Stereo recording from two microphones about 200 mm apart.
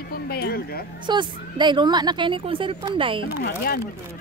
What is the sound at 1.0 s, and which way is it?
A woman's voice, 25° right (ahead or behind).